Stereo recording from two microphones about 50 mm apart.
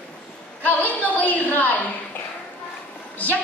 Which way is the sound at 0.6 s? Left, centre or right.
Left.